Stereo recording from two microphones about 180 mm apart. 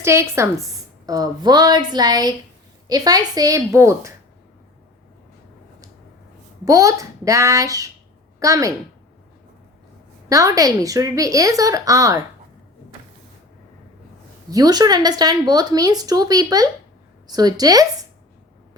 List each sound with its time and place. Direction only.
0.0 s a child's voice: 15° right (ahead or behind)
6.7 s a child's voice: 20° right (ahead or behind)
10.2 s speech: 20° right (ahead or behind)
14.5 s speech: 20° right (ahead or behind)